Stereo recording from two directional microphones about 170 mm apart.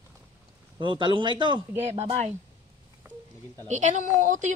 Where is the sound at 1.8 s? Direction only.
40° right (ahead or behind).